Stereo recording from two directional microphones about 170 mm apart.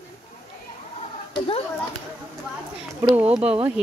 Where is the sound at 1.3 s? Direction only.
35° left (ahead or behind).